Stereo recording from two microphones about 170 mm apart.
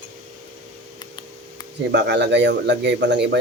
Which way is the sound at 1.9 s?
90° right.